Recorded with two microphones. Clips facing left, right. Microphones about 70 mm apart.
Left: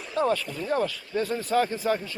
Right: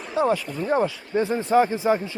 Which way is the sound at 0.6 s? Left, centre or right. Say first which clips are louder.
Right 4 dB; right.